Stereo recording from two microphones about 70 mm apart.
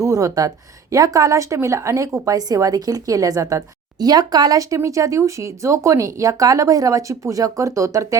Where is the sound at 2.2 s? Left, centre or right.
Right.